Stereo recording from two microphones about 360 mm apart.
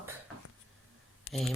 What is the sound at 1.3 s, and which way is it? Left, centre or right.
Speech, left.